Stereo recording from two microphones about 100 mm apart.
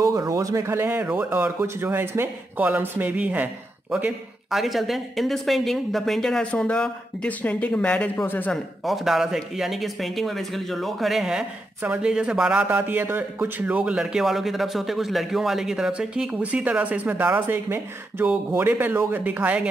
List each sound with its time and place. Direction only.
0.0 s speech: 35° right (ahead or behind); by 3.4 s 15° right (ahead or behind)
4.5 s speech: centre (ahead or behind)
8.8 s speech: centre (ahead or behind)